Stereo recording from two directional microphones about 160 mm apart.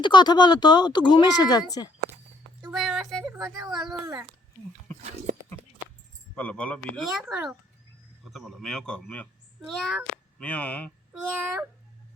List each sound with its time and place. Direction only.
0.0 s speech: 30° left (ahead or behind)
2.7 s a sound: centre (ahead or behind)
3.9 s a child's voice: 25° right (ahead or behind)
5.0 s speech: 50° right (ahead or behind)
5.6 s a sound: 10° right (ahead or behind)
6.3 s a child's voice: 10° left (ahead or behind)
11.3 s speech: 10° right (ahead or behind)